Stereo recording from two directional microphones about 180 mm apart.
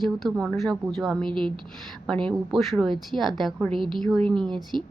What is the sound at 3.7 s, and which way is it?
Speech, 25° right (ahead or behind).